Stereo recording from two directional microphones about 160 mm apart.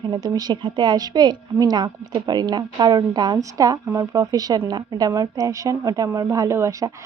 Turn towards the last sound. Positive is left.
turn(degrees=-15)  # may be behind; listen again after turning